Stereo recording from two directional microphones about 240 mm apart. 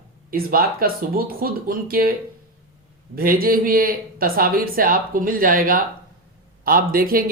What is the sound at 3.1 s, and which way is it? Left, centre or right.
Speech, right.